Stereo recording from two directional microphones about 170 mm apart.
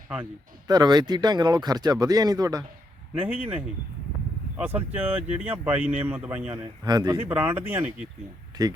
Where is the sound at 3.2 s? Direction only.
10° right (ahead or behind).